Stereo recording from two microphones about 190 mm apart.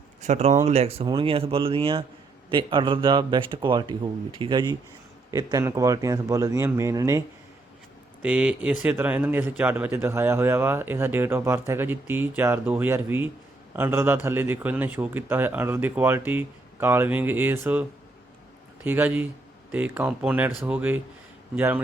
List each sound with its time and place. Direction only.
0.2 s a man's voice: 35° right (ahead or behind); by 7.2 s 15° right (ahead or behind)
8.2 s a man's voice: 5° right (ahead or behind)